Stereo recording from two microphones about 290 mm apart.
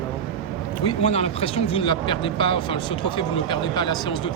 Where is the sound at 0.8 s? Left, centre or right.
Left.